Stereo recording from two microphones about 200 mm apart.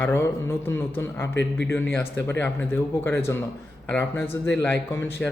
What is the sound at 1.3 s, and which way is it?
Speech, 60° left (ahead or behind).